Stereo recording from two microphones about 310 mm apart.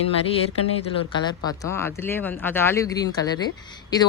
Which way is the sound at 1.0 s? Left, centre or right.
Centre.